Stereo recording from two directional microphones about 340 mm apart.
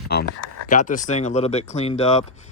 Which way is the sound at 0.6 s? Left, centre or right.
Left.